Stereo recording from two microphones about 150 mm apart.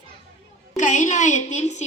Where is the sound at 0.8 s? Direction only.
55° left (ahead or behind).